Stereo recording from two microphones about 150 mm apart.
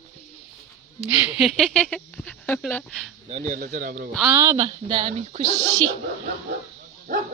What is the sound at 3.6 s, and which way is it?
Speech, 80° right.